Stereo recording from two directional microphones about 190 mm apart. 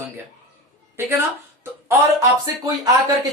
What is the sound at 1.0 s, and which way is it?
Speech, 10° right (ahead or behind).